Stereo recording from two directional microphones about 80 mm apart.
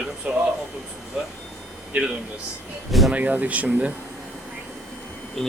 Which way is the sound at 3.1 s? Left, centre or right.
Centre.